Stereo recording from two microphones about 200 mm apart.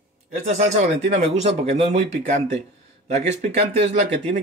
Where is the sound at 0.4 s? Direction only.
35° right (ahead or behind).